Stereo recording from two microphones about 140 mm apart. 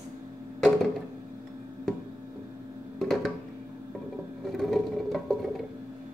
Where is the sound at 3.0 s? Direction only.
Centre (ahead or behind).